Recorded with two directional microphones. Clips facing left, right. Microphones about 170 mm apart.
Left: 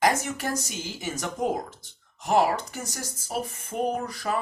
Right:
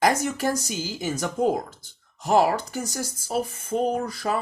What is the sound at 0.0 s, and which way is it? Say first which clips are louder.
Speech: right 3 dB; 35° right (ahead or behind).